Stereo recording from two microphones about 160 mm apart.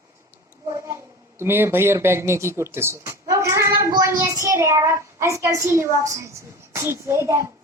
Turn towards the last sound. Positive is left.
turn(degrees=-20)  # may be behind; listen again after turning